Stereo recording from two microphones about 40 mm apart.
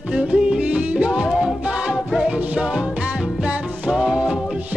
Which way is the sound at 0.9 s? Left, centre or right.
Right.